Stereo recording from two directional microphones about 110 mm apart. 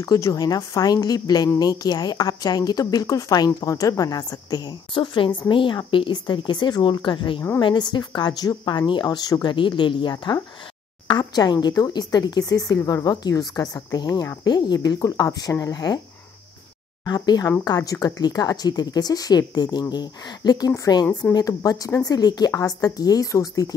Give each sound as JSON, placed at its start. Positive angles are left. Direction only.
{"t": 0.0, "sound": "speech", "side_deg": 30}
{"t": 17.0, "sound": "speech", "side_deg": 40}